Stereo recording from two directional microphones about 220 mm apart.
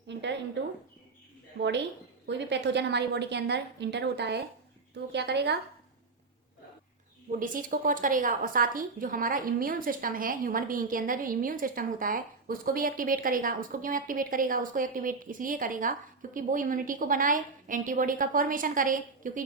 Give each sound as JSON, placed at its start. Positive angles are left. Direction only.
{"t": 0.1, "sound": "a sound", "side_deg": -55}
{"t": 1.5, "sound": "a woman's voice", "side_deg": -50}
{"t": 7.3, "sound": "a woman's voice", "side_deg": -40}